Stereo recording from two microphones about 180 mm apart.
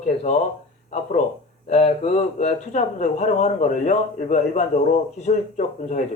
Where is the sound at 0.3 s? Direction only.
40° left (ahead or behind).